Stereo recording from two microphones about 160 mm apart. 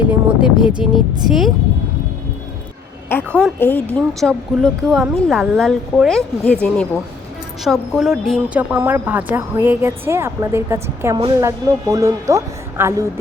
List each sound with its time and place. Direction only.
0.0 s a woman's voice: 10° right (ahead or behind)
3.3 s a woman's voice: 10° left (ahead or behind); by 13.1 s 15° right (ahead or behind)